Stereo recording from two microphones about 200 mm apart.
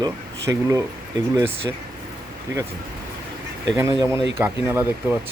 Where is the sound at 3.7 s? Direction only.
15° right (ahead or behind).